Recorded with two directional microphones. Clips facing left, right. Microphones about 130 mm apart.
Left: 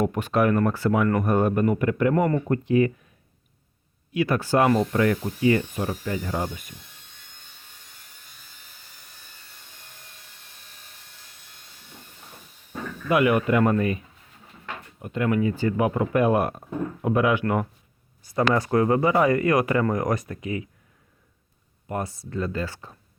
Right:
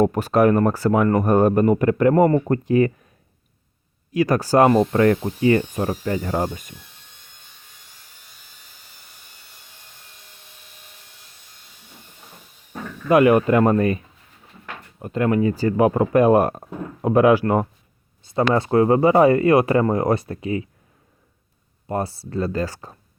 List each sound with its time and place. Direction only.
0.0 s speech: 40° right (ahead or behind)
4.1 s speech: 40° right (ahead or behind)
5.2 s speech: 40° right (ahead or behind)
13.1 s speech: 40° right (ahead or behind)
21.8 s speech: 30° right (ahead or behind)